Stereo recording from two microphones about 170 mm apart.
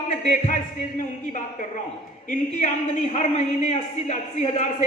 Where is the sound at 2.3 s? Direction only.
50° left (ahead or behind).